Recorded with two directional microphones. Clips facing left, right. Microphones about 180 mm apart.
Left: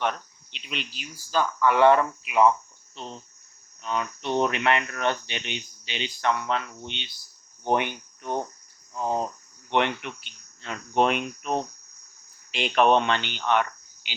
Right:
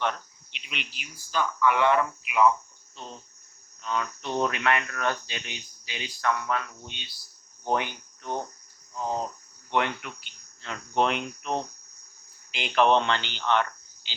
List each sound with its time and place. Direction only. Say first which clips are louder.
0.5 s speech: left 4 dB; 35° left (ahead or behind)
2.9 s cricket: left 3 dB; 20° left (ahead or behind)
3.8 s speech: left 2 dB; 20° left (ahead or behind)
7.6 s cricket: left 3 dB; 20° left (ahead or behind)
9.6 s speech: left 3 dB; 25° left (ahead or behind)